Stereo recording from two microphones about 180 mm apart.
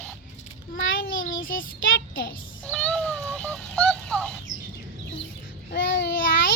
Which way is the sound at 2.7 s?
5° left (ahead or behind).